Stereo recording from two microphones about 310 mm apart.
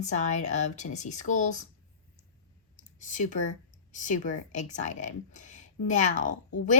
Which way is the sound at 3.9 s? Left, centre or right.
Left.